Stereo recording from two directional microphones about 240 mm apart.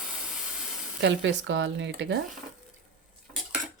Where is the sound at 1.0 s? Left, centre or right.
Right.